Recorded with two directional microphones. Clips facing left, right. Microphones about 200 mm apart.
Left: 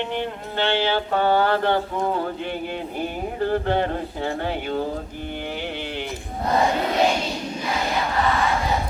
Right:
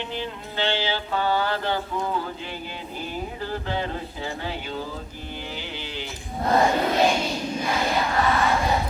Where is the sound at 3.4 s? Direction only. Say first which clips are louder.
Left 10 dB; 55° left (ahead or behind).